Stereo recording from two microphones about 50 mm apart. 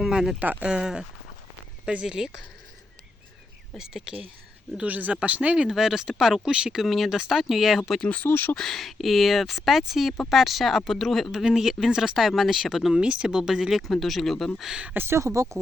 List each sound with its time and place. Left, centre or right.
0.1 s a sound: centre
0.3 s speech: right
0.6 s speech: centre
3.8 s speech: centre
4.8 s speech: right
5.6 s speech: centre
8.0 s speech: left
8.3 s speech: left
8.5 s speech: centre
11.4 s speech: centre
12.9 s speech: centre
15.1 s speech: right